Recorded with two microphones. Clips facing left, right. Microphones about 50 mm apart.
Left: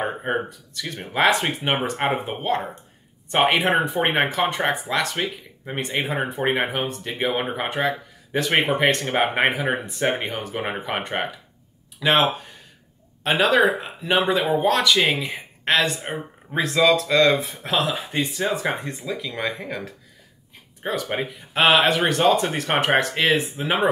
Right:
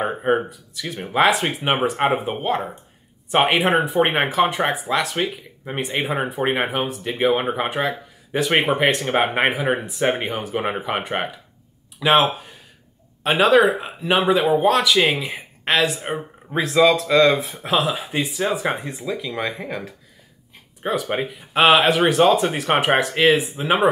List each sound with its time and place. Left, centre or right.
0.0 s speech: centre